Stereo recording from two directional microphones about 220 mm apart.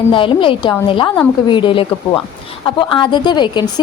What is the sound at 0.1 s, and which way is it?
A woman's voice, 25° left (ahead or behind).